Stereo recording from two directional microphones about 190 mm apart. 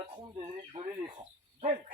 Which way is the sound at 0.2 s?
25° right (ahead or behind).